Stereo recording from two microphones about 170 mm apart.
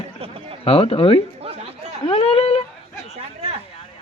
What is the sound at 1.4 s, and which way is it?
Chatter, 35° right (ahead or behind).